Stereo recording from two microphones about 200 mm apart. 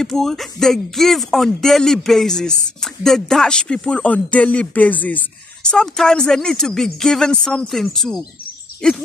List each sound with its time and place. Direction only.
0.0 s speech: centre (ahead or behind)